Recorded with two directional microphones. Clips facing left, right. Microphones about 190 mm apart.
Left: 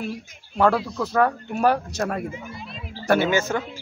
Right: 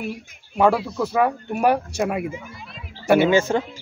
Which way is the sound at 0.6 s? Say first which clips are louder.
Right 2 dB; 10° right (ahead or behind).